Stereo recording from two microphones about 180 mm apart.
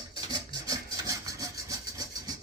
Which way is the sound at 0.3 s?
20° right (ahead or behind).